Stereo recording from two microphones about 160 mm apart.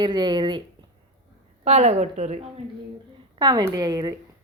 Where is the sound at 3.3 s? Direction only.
25° right (ahead or behind).